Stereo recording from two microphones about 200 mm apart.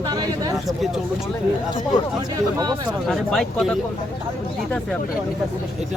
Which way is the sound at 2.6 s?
20° right (ahead or behind).